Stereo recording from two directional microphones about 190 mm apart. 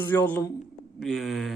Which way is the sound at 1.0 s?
Centre (ahead or behind).